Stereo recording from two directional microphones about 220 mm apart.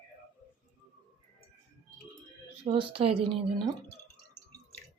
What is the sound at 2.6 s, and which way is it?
Speech, 25° right (ahead or behind).